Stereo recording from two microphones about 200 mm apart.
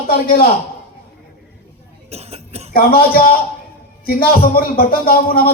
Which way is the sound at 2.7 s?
50° left (ahead or behind).